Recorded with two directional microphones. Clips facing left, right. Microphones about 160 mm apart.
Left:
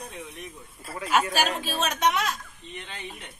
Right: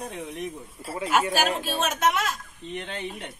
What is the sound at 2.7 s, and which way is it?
Speech, 70° right (ahead or behind).